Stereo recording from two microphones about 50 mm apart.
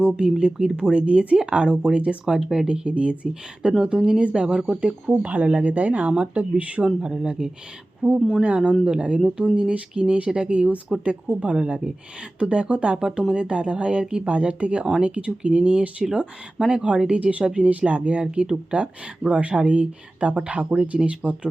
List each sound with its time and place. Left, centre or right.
0.2 s speech: centre
5.2 s speech: right
6.8 s speech: centre
8.4 s speech: centre
18.3 s speech: centre